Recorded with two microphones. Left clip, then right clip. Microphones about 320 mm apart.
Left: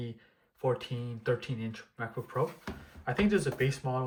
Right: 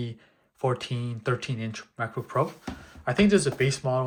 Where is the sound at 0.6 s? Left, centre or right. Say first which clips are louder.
Right 4 dB; centre.